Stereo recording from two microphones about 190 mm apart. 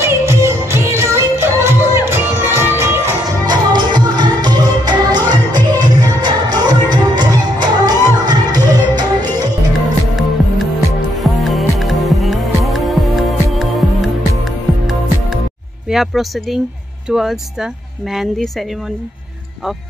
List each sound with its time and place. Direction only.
0.0 s music: 15° right (ahead or behind)
11.1 s music: centre (ahead or behind)
15.9 s speech: centre (ahead or behind)